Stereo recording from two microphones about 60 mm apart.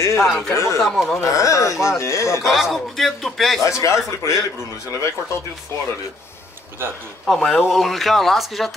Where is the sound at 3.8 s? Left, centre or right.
Left.